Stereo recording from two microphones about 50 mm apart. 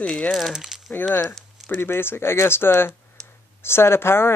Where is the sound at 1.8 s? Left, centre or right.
Left.